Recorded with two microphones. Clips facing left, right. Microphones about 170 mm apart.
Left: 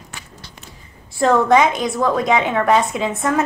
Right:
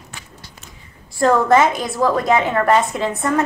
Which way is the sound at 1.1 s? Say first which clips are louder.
Even; centre (ahead or behind).